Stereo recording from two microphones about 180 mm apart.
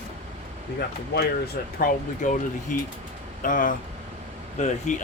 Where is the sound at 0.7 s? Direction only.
60° left (ahead or behind).